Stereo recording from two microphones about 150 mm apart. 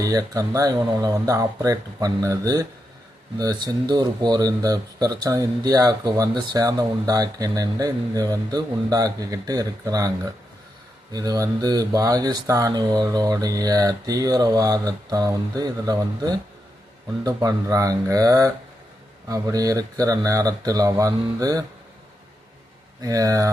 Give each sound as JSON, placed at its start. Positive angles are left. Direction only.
{"t": 0.0, "sound": "speech", "side_deg": -25}
{"t": 11.1, "sound": "speech", "side_deg": -25}
{"t": 23.0, "sound": "speech", "side_deg": -25}